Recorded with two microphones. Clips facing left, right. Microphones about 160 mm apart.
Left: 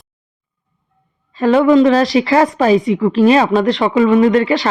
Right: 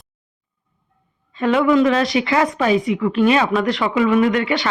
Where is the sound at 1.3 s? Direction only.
35° left (ahead or behind).